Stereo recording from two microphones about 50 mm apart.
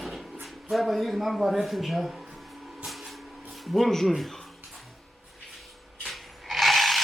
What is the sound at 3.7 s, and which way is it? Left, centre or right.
Speech, centre.